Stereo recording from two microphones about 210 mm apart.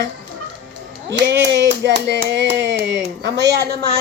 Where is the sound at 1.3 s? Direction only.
55° right (ahead or behind).